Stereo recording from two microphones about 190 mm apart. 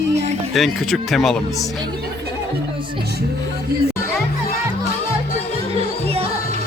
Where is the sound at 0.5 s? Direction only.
Centre (ahead or behind).